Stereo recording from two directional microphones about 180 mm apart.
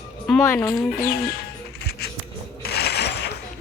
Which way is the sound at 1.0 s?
60° left (ahead or behind).